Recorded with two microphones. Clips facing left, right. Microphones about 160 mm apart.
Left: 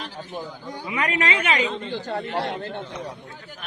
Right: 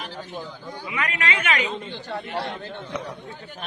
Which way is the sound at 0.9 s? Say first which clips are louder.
Left 3 dB; 35° left (ahead or behind).